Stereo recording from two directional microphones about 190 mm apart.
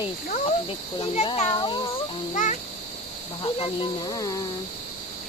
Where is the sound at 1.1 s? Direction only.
30° left (ahead or behind).